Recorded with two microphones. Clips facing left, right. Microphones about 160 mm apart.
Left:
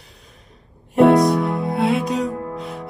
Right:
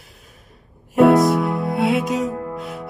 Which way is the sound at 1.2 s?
Centre (ahead or behind).